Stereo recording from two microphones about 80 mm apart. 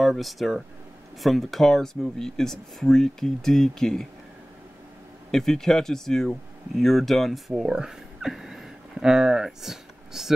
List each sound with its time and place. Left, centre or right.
0.0 s speech: centre
5.3 s speech: centre